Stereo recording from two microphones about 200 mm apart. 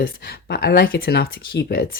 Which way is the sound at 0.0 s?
50° left (ahead or behind).